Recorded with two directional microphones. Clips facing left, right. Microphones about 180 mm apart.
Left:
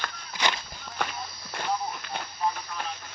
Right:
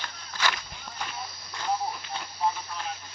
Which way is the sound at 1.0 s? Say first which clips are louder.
Left 6 dB; 65° left (ahead or behind).